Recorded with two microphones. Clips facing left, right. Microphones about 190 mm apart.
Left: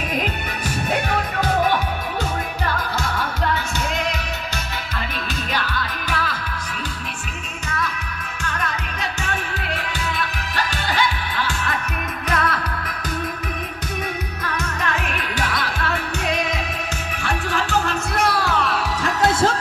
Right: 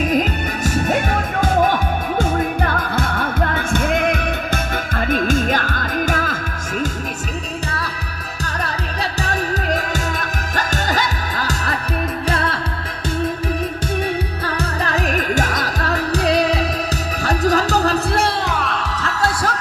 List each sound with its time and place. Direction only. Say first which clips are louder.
2.1 s music: right 7 dB; 55° right (ahead or behind)
9.2 s music: right 6 dB; 35° right (ahead or behind)
14.4 s music: right 4 dB; 35° right (ahead or behind)
19.0 s music: left 3 dB; 25° left (ahead or behind)